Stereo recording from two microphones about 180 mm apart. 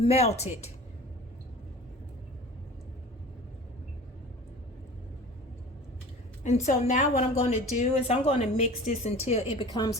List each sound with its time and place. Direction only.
0.0 s a woman's voice: 35° left (ahead or behind)
6.4 s a woman's voice: 40° left (ahead or behind)
9.7 s a woman's voice: 20° left (ahead or behind)